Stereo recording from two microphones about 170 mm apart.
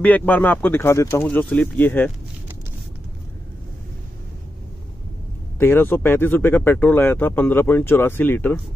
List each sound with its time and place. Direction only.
0.0 s speech: 10° left (ahead or behind)
5.6 s speech: 10° left (ahead or behind)